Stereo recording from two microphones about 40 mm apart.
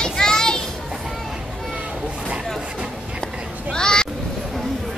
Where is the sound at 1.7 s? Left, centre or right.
Right.